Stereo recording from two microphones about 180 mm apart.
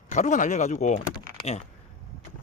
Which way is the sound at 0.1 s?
45° left (ahead or behind).